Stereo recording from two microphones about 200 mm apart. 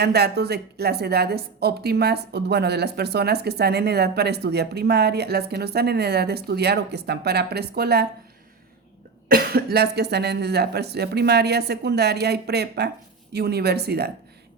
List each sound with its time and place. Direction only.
0.0 s speech: 55° right (ahead or behind)
9.3 s speech: 50° right (ahead or behind)